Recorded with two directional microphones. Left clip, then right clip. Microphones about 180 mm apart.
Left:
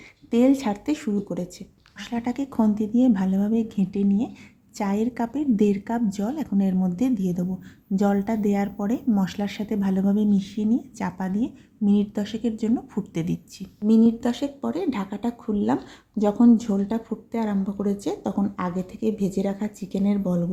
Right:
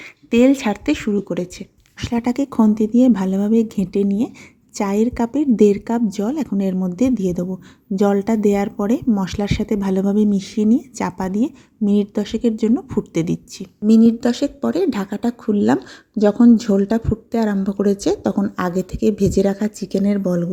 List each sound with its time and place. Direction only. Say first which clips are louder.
0.3 s speech: right 6 dB; 20° right (ahead or behind)